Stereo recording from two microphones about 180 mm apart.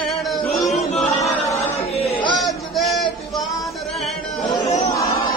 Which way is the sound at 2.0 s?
35° left (ahead or behind).